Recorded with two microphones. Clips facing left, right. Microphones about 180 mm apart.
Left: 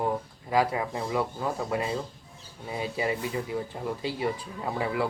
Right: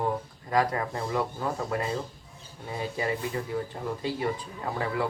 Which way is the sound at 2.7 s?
15° left (ahead or behind).